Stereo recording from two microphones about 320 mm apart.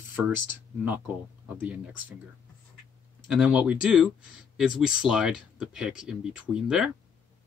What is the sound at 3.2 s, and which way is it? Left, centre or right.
Speech, centre.